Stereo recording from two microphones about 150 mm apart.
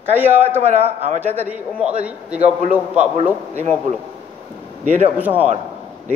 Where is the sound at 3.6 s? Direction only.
50° right (ahead or behind).